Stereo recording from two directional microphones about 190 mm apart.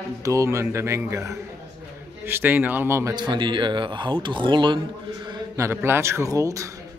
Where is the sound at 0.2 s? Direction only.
15° right (ahead or behind).